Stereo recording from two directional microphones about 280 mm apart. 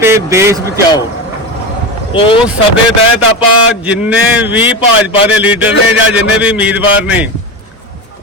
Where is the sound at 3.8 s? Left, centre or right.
Centre.